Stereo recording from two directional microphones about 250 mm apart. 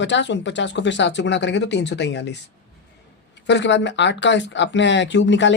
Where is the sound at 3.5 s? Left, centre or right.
Left.